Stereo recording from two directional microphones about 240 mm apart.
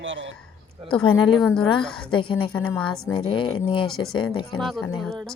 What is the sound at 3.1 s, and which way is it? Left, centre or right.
Speech, left.